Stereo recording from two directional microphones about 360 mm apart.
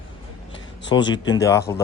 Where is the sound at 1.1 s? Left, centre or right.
Centre.